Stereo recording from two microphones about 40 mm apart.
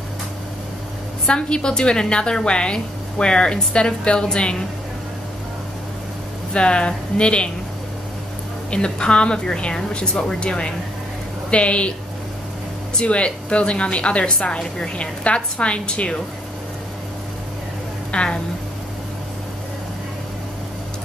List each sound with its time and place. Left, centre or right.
1.2 s a woman's voice: left
6.5 s a woman's voice: left
8.6 s a woman's voice: left
13.0 s a woman's voice: left
18.1 s a sound: left